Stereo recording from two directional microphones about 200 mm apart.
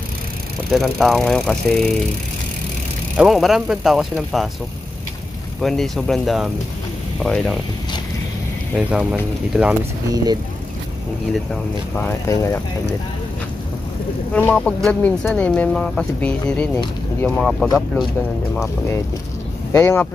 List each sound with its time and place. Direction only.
0.7 s speech: centre (ahead or behind)
3.2 s speech: centre (ahead or behind)
5.6 s speech: centre (ahead or behind)
8.7 s speech: 5° right (ahead or behind)
10.1 s speech: 20° right (ahead or behind)
11.9 s speech: 10° left (ahead or behind)
14.3 s speech: 5° left (ahead or behind)
19.7 s speech: 10° left (ahead or behind)